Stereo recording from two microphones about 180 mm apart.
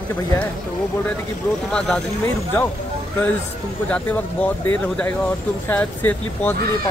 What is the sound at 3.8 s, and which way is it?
Speech, 5° left (ahead or behind).